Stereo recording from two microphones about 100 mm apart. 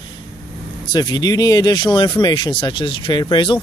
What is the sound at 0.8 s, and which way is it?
Speech, 45° left (ahead or behind).